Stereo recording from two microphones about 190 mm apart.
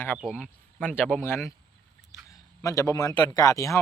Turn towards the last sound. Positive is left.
turn(degrees=15)  # may be behind; listen again after turning